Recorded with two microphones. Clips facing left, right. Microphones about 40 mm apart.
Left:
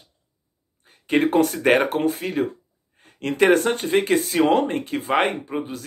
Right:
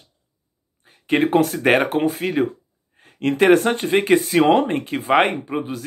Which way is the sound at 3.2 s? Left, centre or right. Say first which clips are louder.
Right 3 dB; centre.